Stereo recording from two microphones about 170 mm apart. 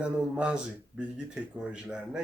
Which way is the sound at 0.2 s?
5° right (ahead or behind).